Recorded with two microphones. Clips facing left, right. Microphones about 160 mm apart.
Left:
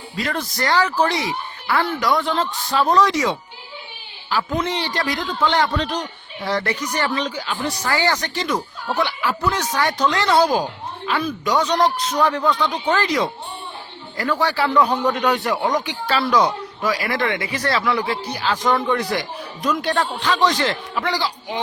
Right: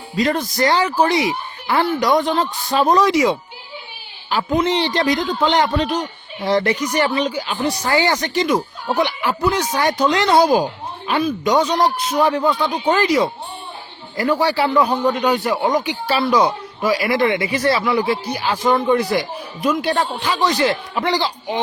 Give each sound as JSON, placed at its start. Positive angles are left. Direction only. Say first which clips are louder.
{"t": 0.2, "sound": "speech", "louder": "right 6 dB", "side_deg": -20}
{"t": 4.6, "sound": "a man's voice", "louder": "right 6 dB", "side_deg": -25}
{"t": 20.9, "sound": "speech", "louder": "right 3 dB", "side_deg": -25}